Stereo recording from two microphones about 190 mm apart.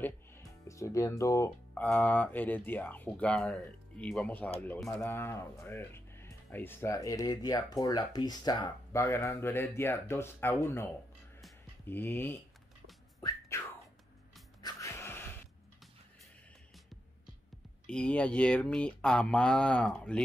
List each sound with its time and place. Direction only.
0.0 s music: 15° left (ahead or behind)
1.7 s speech: 5° left (ahead or behind)
13.2 s music: 15° left (ahead or behind)
17.8 s speech: 5° left (ahead or behind)